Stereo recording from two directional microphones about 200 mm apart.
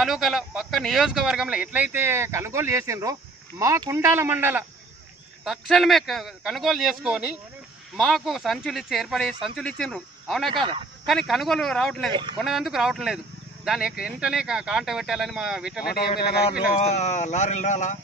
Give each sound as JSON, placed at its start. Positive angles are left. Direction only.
{"t": 0.0, "sound": "speech", "side_deg": 0}
{"t": 12.1, "sound": "speech", "side_deg": -20}
{"t": 12.4, "sound": "speech", "side_deg": 0}
{"t": 15.8, "sound": "speech", "side_deg": 50}
{"t": 16.7, "sound": "speech", "side_deg": 35}